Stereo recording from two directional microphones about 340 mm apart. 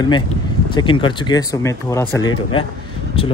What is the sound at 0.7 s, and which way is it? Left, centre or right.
Speech, centre.